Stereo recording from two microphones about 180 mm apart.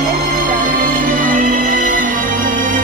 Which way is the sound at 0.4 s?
45° right (ahead or behind).